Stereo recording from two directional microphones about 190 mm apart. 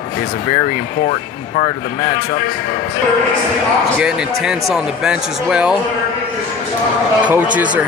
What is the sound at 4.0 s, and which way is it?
Speech, 5° right (ahead or behind).